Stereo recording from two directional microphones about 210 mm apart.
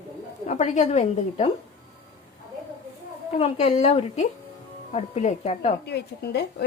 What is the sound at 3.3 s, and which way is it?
A woman's voice, 30° left (ahead or behind).